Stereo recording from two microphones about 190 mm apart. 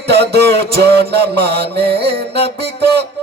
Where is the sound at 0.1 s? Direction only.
60° right (ahead or behind).